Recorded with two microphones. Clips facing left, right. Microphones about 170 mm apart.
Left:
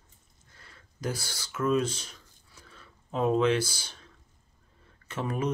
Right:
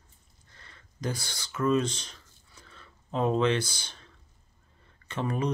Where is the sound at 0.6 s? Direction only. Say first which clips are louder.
Even; 5° left (ahead or behind).